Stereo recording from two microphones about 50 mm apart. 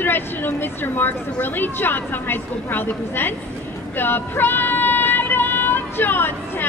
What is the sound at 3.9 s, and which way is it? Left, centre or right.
Female singing, left.